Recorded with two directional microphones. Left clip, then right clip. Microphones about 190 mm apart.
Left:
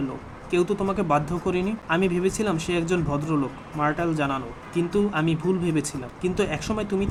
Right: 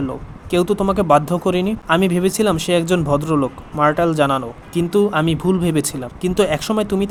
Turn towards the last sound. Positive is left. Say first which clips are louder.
# right 8 dB
turn(degrees=-40)  # may be behind; listen again after turning